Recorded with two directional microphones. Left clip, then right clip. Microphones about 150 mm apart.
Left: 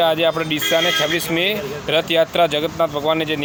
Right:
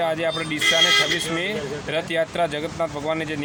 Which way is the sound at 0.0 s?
30° left (ahead or behind).